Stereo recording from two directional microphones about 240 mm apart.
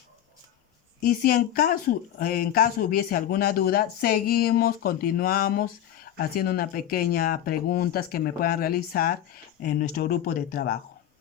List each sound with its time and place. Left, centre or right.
1.0 s speech: left